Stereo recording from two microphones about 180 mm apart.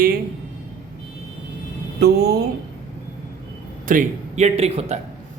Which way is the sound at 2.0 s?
60° right (ahead or behind).